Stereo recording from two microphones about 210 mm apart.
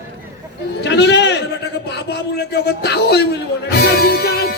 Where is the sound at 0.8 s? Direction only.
55° left (ahead or behind).